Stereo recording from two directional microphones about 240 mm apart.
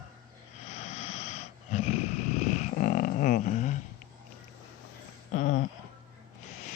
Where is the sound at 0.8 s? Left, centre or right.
Left.